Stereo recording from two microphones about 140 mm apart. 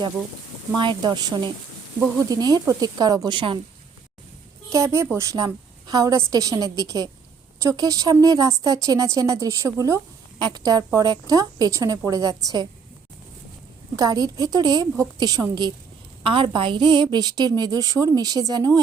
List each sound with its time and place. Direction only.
0.8 s a woman's voice: 35° right (ahead or behind)
2.3 s a woman's voice: 25° right (ahead or behind)
4.7 s speech: 20° right (ahead or behind)
13.9 s a woman's voice: 25° right (ahead or behind)